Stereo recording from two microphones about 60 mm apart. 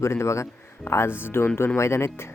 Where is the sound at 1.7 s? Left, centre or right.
Left.